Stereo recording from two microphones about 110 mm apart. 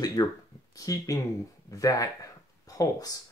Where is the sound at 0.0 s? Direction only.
35° left (ahead or behind).